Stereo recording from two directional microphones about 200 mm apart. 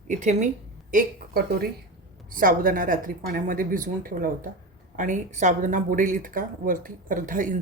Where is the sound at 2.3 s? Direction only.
45° right (ahead or behind).